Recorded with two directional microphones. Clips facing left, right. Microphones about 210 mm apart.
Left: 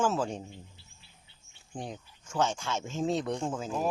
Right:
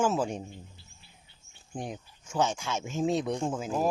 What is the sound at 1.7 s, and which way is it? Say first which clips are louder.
Speech: right 2 dB; 15° right (ahead or behind).